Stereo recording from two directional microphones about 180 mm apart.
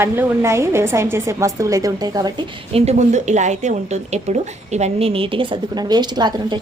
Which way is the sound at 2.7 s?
40° right (ahead or behind).